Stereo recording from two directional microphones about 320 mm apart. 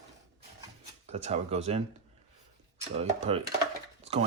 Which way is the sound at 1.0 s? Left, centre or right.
Centre.